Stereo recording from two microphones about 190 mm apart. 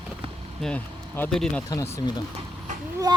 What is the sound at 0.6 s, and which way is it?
Speech, 10° left (ahead or behind).